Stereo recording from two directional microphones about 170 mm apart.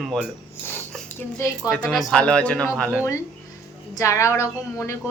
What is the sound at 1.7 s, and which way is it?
Speech, centre (ahead or behind).